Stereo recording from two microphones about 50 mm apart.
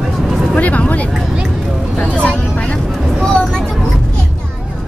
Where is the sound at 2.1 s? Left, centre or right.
Left.